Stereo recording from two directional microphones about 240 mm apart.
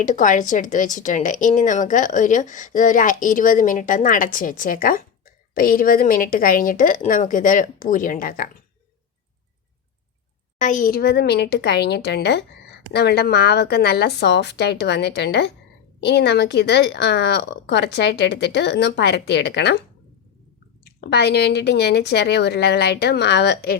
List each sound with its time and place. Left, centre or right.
0.0 s a woman's voice: left
10.6 s speech: left
20.8 s speech: left